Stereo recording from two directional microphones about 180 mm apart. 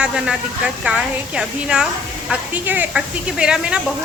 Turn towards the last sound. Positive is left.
turn(degrees=-5)  # may be behind; listen again after turning